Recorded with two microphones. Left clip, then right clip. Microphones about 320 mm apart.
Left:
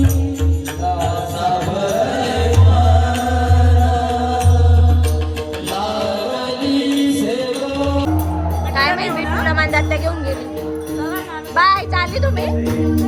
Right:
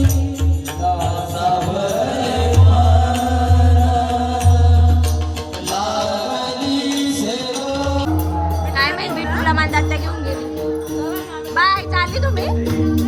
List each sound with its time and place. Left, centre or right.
0.9 s music: centre
7.1 s music: centre
8.7 s music: centre
11.5 s music: centre